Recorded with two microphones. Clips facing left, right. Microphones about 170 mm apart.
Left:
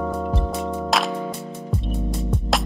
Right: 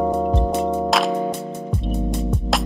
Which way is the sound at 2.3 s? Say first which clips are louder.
Right 1 dB; centre (ahead or behind).